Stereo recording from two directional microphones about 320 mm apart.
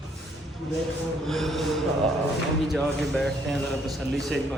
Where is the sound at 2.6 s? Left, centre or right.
Centre.